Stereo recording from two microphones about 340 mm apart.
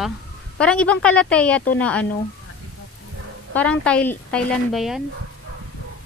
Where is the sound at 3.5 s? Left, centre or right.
Centre.